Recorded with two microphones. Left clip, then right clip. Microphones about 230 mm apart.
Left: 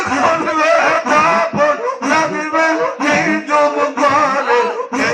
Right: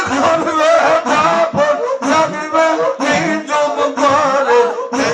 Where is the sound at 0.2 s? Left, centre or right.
Right.